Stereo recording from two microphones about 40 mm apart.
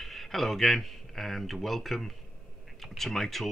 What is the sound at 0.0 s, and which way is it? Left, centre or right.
Speech, centre.